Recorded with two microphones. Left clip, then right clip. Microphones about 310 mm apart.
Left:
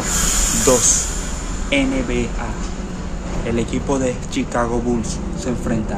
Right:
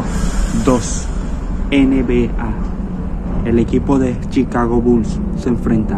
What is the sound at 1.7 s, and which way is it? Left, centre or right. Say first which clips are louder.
Speech: right 5 dB; centre.